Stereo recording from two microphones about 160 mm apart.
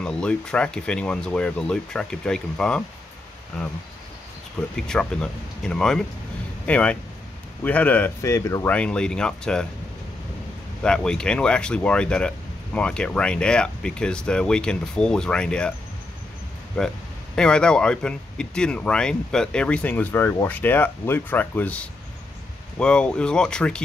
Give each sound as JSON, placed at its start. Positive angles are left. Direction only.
{"t": 0.0, "sound": "speech", "side_deg": 5}
{"t": 4.6, "sound": "speech", "side_deg": 5}
{"t": 8.6, "sound": "speech", "side_deg": 5}
{"t": 10.8, "sound": "speech", "side_deg": 5}
{"t": 16.8, "sound": "speech", "side_deg": 5}